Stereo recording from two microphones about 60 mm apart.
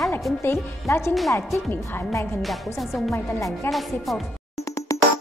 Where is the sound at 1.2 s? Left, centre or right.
Left.